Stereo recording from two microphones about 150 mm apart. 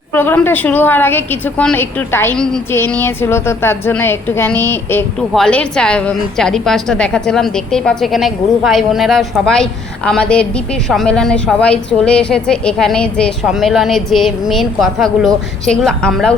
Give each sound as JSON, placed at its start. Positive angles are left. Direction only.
{"t": 0.1, "sound": "a woman's voice", "side_deg": 15}